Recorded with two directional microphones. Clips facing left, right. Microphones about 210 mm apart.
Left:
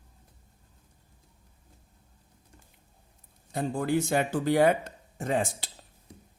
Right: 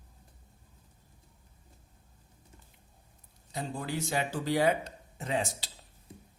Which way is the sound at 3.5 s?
50° left (ahead or behind).